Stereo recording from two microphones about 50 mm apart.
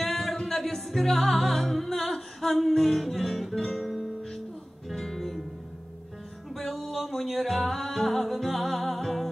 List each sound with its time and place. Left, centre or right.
0.0 s music: centre
6.5 s music: centre